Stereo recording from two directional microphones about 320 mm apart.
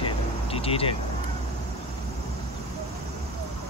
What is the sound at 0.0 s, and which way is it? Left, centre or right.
Vehicle, centre.